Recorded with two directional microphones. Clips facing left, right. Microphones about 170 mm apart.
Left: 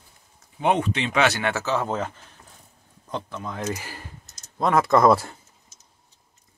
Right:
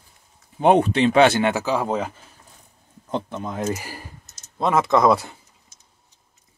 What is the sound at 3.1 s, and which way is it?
Speech, 20° right (ahead or behind).